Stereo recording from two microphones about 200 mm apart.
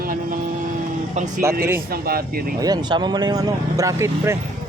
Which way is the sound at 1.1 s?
40° right (ahead or behind).